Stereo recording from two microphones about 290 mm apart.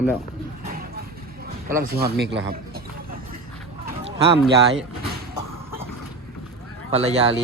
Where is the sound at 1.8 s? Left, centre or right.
Right.